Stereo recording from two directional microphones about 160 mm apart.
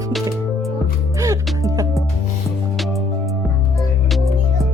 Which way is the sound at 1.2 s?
20° right (ahead or behind).